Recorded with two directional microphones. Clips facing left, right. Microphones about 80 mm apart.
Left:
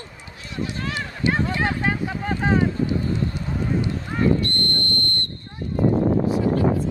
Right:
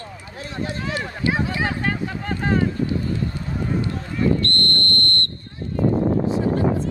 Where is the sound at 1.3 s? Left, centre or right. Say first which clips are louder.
Left 1 dB; centre.